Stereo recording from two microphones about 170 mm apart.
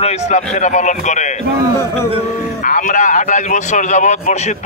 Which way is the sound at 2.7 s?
50° left (ahead or behind).